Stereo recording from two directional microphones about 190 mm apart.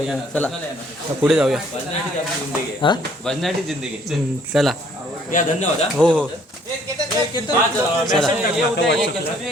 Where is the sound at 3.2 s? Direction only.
Centre (ahead or behind).